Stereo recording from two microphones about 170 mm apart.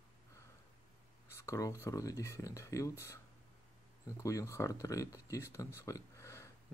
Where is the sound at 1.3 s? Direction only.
15° left (ahead or behind).